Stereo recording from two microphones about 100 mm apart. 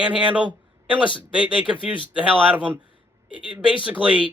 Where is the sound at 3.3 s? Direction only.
60° left (ahead or behind).